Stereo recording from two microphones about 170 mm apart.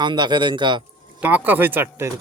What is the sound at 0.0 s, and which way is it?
Speech, 25° right (ahead or behind).